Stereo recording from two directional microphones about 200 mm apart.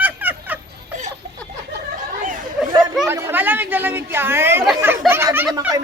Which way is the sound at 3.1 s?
10° right (ahead or behind).